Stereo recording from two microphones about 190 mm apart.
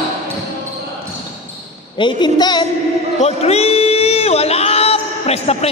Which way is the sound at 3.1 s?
35° left (ahead or behind).